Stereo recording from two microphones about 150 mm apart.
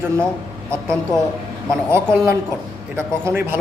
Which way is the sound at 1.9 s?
15° right (ahead or behind).